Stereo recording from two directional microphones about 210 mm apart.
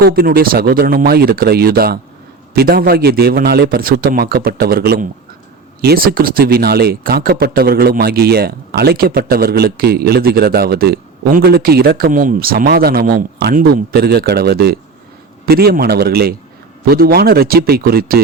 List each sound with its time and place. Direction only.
0.0 s speech: 45° right (ahead or behind)